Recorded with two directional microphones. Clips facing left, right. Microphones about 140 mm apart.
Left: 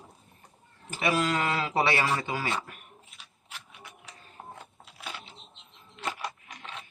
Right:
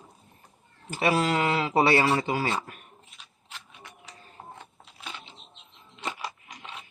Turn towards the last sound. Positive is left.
turn(degrees=0)  # may be behind; listen again after turning